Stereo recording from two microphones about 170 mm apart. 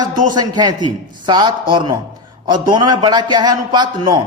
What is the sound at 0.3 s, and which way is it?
A man's voice, 25° right (ahead or behind).